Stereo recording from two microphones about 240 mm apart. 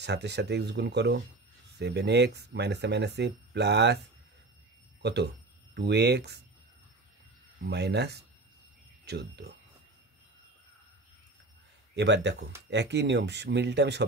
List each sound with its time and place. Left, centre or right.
0.0 s speech: right
5.0 s speech: right
7.6 s speech: right
11.9 s speech: right